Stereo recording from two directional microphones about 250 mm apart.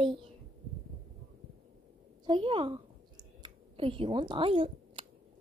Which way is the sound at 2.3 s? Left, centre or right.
Right.